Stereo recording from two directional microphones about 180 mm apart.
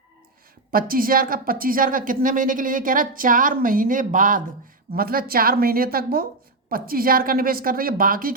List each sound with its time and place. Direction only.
0.7 s a woman's voice: 55° right (ahead or behind)